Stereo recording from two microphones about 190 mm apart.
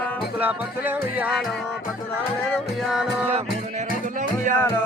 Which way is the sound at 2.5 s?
Centre (ahead or behind).